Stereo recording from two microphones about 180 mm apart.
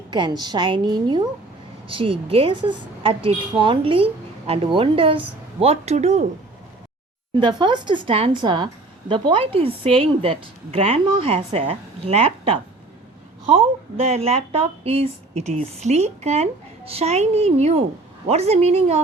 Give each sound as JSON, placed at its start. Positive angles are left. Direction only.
{"t": 0.1, "sound": "a woman's voice", "side_deg": -25}
{"t": 7.3, "sound": "a woman's voice", "side_deg": -25}
{"t": 14.1, "sound": "a woman's voice", "side_deg": -35}